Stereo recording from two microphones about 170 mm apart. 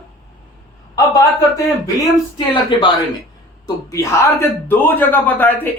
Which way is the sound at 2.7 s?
30° left (ahead or behind).